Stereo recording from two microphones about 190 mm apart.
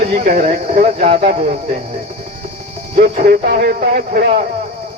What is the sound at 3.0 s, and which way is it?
Speech, 50° right (ahead or behind).